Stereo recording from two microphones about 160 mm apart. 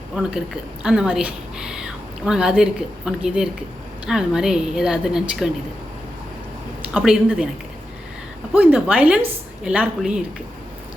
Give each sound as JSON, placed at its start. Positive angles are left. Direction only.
{"t": 0.2, "sound": "speech", "side_deg": -5}
{"t": 6.8, "sound": "speech", "side_deg": -5}
{"t": 8.5, "sound": "a woman's voice", "side_deg": -10}